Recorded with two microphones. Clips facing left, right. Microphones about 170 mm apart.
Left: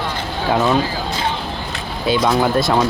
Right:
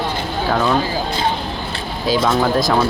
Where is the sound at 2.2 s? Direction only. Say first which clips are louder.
Left 1 dB; centre (ahead or behind).